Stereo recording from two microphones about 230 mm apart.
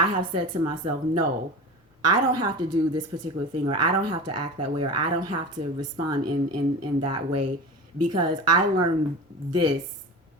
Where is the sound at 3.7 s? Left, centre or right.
Right.